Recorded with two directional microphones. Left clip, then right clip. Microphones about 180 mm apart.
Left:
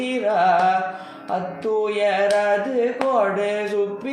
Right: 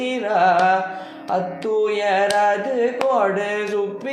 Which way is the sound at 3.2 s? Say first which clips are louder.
Right 1 dB; 30° right (ahead or behind).